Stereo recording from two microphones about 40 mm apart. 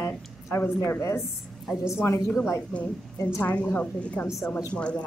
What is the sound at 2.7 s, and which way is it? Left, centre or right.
A woman's voice, left.